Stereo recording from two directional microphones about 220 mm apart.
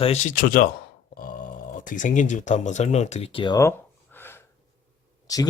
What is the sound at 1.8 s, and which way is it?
Speech, 35° left (ahead or behind).